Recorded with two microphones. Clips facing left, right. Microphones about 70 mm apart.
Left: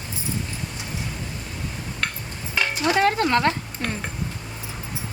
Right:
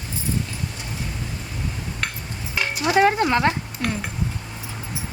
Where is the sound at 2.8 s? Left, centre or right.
Centre.